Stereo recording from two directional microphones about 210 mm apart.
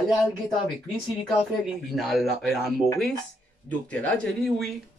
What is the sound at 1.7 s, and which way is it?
Speech, centre (ahead or behind).